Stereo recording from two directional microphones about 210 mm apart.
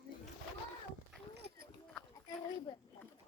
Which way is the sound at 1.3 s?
55° right (ahead or behind).